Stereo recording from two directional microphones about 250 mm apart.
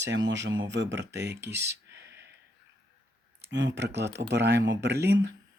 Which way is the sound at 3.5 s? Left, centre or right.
Right.